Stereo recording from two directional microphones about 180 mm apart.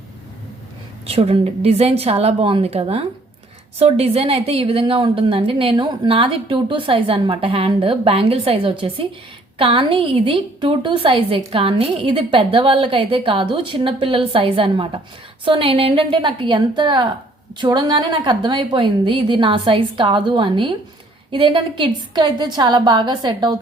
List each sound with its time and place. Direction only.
1.0 s a woman's voice: 30° right (ahead or behind)